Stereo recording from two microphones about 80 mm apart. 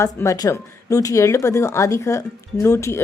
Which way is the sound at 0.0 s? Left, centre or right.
Left.